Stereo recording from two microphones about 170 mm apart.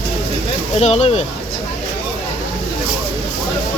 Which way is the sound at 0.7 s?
40° left (ahead or behind).